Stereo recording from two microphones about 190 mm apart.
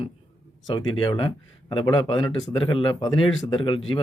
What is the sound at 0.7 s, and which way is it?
Speech, 25° left (ahead or behind).